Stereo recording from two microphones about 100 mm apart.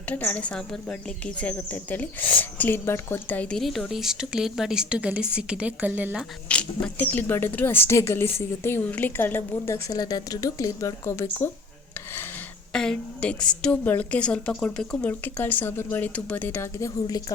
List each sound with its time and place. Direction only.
0.1 s speech: 15° left (ahead or behind)
3.6 s a woman's voice: centre (ahead or behind); by 6.1 s 15° right (ahead or behind)
6.5 s speech: 10° left (ahead or behind)
9.9 s speech: 40° left (ahead or behind); by 11.5 s 25° left (ahead or behind)
12.7 s speech: 5° left (ahead or behind)
15.2 s speech: 15° left (ahead or behind); by 17.3 s 40° left (ahead or behind)